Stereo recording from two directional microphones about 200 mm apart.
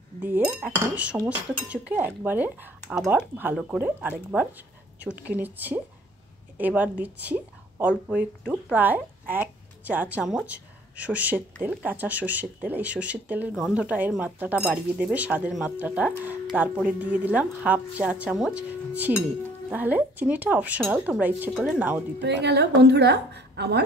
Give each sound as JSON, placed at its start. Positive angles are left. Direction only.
{"t": 0.2, "sound": "a woman's voice", "side_deg": -10}
{"t": 22.2, "sound": "a woman's voice", "side_deg": -60}